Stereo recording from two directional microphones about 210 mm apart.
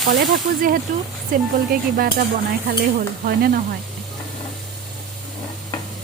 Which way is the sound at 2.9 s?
45° right (ahead or behind).